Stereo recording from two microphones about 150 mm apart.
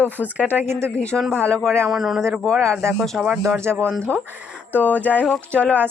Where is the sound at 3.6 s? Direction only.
15° right (ahead or behind).